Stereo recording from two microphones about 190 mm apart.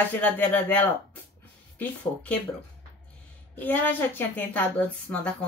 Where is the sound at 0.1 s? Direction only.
10° left (ahead or behind).